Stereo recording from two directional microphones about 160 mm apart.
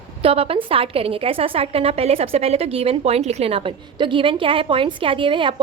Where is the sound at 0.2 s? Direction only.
35° right (ahead or behind).